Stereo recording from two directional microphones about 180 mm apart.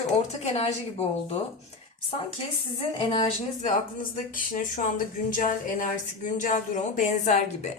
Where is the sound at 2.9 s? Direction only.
25° left (ahead or behind).